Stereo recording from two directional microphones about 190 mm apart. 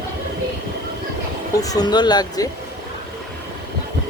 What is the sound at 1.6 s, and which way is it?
Speech, 20° left (ahead or behind).